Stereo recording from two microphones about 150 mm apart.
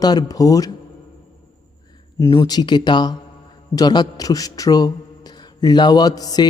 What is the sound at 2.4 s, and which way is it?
A man's voice, 25° left (ahead or behind).